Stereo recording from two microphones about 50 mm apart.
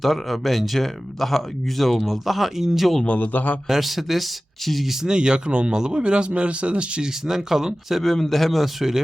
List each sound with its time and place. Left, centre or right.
0.0 s speech: centre
3.2 s a man's voice: left
3.7 s speech: centre
5.0 s speech: centre
7.3 s speech: centre
8.0 s speech: centre